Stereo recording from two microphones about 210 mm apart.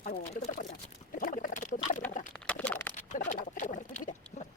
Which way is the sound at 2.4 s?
5° left (ahead or behind).